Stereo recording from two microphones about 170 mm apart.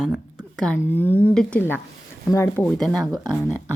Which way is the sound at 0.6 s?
10° left (ahead or behind).